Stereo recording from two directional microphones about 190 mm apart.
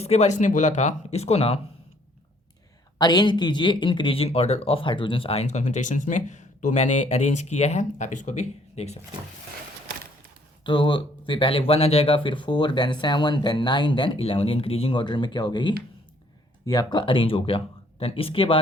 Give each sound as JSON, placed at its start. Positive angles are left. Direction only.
{"t": 0.0, "sound": "speech", "side_deg": 35}
{"t": 3.0, "sound": "speech", "side_deg": 20}
{"t": 10.6, "sound": "speech", "side_deg": 25}